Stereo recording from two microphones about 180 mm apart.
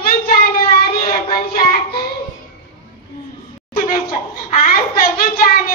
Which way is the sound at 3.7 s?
50° left (ahead or behind).